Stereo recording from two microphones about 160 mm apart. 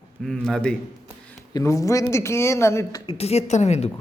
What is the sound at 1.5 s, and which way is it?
Speech, 20° left (ahead or behind).